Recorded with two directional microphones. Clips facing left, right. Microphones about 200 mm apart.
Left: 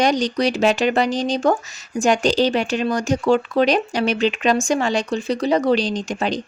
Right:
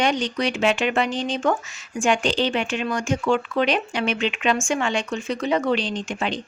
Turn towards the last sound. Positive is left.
turn(degrees=40)  # may be behind; listen again after turning